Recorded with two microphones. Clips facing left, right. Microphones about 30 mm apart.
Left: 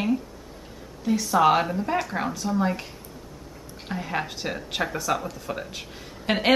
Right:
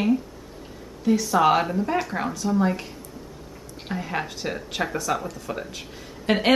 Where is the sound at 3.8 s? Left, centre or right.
Centre.